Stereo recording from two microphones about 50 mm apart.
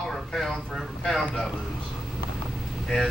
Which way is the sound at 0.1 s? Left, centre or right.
Centre.